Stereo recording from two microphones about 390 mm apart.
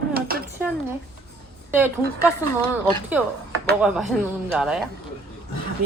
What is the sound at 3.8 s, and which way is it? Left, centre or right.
Speech, centre.